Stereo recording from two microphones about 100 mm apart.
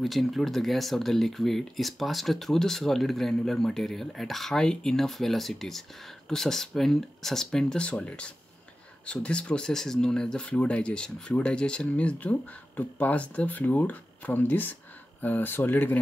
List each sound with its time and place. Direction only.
0.0 s speech: centre (ahead or behind); by 16.0 s 20° left (ahead or behind)